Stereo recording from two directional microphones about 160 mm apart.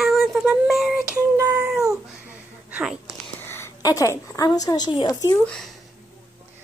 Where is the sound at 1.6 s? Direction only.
5° right (ahead or behind).